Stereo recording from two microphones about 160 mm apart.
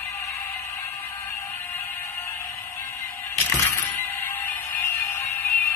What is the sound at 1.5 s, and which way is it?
Music, 15° left (ahead or behind).